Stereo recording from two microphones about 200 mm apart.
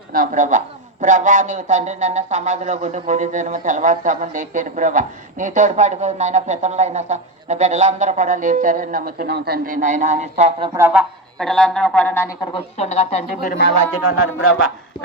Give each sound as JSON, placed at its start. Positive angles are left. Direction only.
{"t": 0.1, "sound": "speech", "side_deg": -45}
{"t": 10.7, "sound": "speech", "side_deg": -10}
{"t": 11.3, "sound": "speech", "side_deg": 5}
{"t": 12.5, "sound": "speech", "side_deg": 30}
{"t": 14.0, "sound": "speech", "side_deg": 90}